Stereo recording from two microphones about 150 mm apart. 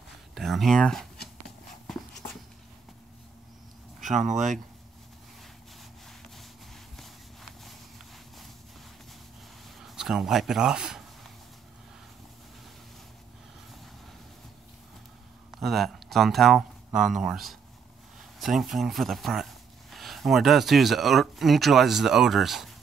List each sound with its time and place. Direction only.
0.3 s speech: centre (ahead or behind)
4.0 s speech: 55° right (ahead or behind)
6.0 s a sound: centre (ahead or behind)
9.8 s speech: centre (ahead or behind)
15.6 s speech: centre (ahead or behind)